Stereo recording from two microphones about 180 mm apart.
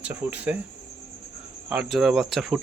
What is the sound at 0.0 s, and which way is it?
Speech, 10° right (ahead or behind).